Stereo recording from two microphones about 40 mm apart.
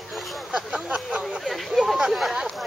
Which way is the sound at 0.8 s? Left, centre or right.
Right.